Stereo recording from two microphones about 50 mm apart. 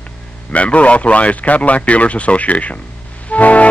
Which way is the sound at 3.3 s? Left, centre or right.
Left.